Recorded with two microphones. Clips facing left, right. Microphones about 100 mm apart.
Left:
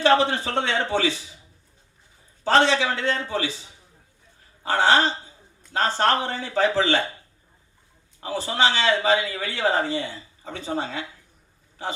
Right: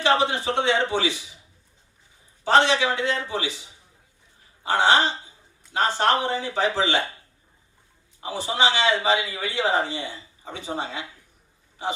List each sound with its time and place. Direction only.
0.0 s speech: 15° right (ahead or behind)
2.5 s speech: 15° right (ahead or behind)
4.7 s speech: 20° right (ahead or behind)
8.2 s speech: 15° right (ahead or behind)